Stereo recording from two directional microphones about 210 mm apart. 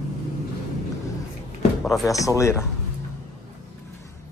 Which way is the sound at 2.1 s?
15° left (ahead or behind).